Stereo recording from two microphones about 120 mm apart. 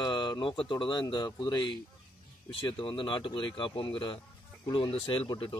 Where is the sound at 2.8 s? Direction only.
45° left (ahead or behind).